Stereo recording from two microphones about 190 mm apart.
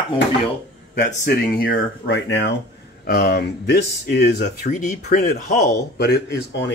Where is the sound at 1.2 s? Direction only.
50° left (ahead or behind).